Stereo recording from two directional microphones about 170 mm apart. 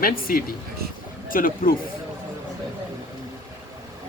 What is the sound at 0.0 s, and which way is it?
Speech, 60° left (ahead or behind).